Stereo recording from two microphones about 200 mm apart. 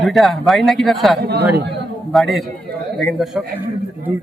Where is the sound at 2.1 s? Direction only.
Centre (ahead or behind).